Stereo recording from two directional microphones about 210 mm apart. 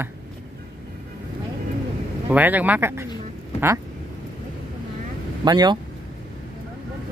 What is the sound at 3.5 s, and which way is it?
Quack, 10° right (ahead or behind).